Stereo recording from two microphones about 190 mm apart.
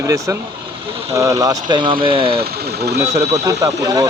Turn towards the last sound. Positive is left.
turn(degrees=-20)  # may be behind; listen again after turning